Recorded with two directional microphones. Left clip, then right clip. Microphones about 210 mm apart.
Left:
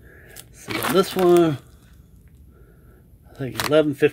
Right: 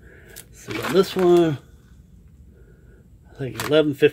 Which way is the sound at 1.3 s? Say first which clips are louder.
Left 1 dB; 15° left (ahead or behind).